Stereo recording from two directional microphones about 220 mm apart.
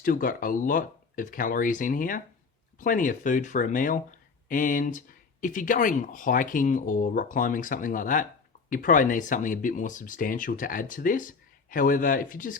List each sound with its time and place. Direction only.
0.0 s speech: 40° left (ahead or behind)